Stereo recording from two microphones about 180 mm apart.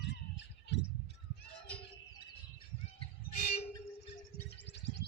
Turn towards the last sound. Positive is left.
turn(degrees=75)  # may be behind; listen again after turning